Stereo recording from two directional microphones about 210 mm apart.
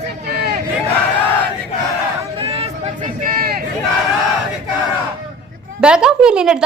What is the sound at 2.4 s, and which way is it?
Chatter, 30° right (ahead or behind).